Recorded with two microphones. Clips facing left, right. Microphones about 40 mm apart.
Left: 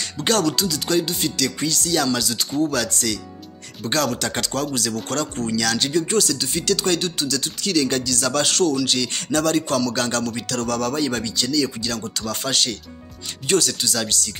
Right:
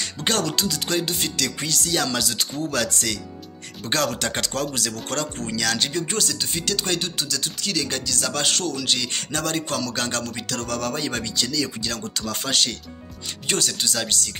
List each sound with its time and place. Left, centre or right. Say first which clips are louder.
0.2 s music: left 4 dB; right
1.7 s speech: left 2 dB; right
2.7 s music: left 1 dB; right
5.6 s a man's voice: left 2 dB; right
7.2 s a man's voice: left 3 dB; centre; by 14.3 s right